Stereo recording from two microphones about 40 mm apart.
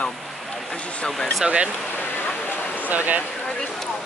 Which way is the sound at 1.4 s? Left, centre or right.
Right.